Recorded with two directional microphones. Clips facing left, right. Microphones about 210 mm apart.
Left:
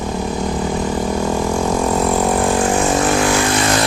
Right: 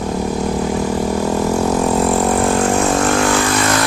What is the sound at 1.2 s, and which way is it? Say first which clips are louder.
Vehicle: right 2 dB; 5° right (ahead or behind).